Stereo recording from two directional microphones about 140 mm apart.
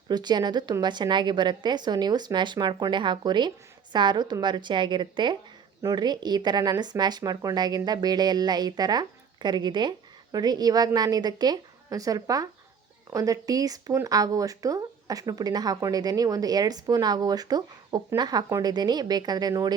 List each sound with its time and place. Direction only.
0.1 s a woman's voice: 30° right (ahead or behind)